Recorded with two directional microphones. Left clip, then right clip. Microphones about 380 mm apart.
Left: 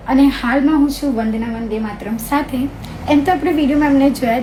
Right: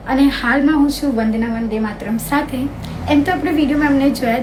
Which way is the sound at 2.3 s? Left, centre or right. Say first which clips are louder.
Left 1 dB; centre.